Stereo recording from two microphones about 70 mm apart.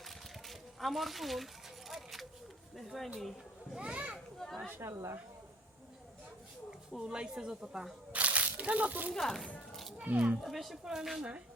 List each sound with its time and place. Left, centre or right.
0.0 s a sound: centre
2.7 s speech: centre
3.8 s speech: centre
4.7 s a woman's voice: right
6.7 s speech: centre
8.1 s a sound: right
9.1 s speech: centre
10.0 s a child's voice: right
10.4 s speech: centre